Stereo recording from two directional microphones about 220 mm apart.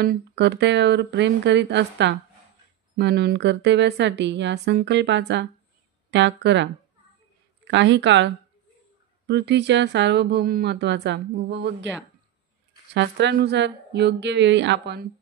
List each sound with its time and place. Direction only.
0.0 s a woman's voice: 50° right (ahead or behind)
9.3 s speech: 50° right (ahead or behind)
12.9 s speech: 55° right (ahead or behind)